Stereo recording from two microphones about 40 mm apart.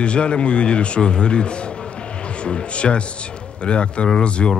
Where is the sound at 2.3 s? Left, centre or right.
Left.